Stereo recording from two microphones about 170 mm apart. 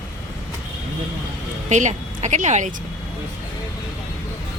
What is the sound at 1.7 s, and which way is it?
Speech, 45° right (ahead or behind).